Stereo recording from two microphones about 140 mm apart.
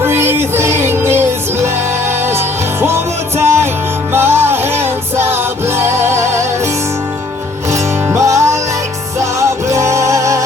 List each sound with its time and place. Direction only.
0.0 s music: 15° right (ahead or behind)
7.7 s music: 20° right (ahead or behind)